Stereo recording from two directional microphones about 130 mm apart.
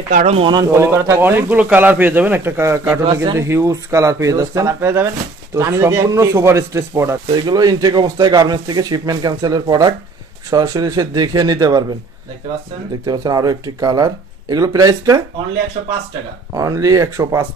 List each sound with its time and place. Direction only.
0.1 s speech: 60° right (ahead or behind)
0.4 s speech: 35° right (ahead or behind)
0.7 s speech: 20° right (ahead or behind)
7.3 s speech: 30° right (ahead or behind)
13.0 s speech: 30° right (ahead or behind)
16.5 s speech: 25° right (ahead or behind)